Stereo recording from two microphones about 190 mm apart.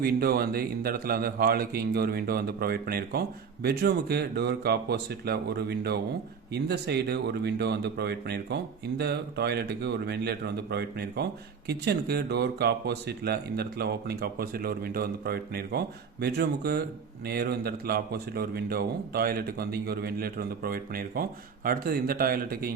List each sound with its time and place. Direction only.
0.0 s a man's voice: 55° right (ahead or behind)